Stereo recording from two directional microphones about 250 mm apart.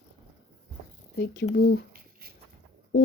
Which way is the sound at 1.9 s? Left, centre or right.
Right.